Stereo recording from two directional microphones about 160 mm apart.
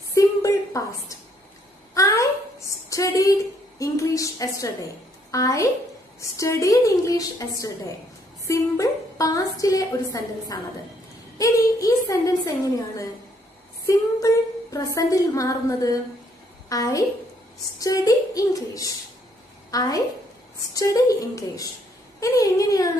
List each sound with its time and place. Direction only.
0.1 s a sound: 20° left (ahead or behind)
2.9 s a woman's voice: 20° left (ahead or behind)
13.8 s female singing: 20° left (ahead or behind)
15.0 s a woman's voice: 20° left (ahead or behind)